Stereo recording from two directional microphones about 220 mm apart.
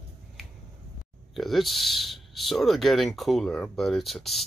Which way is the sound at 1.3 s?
Centre (ahead or behind).